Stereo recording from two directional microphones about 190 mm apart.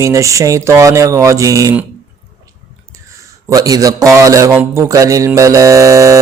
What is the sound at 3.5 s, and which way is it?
Mantra, 20° right (ahead or behind).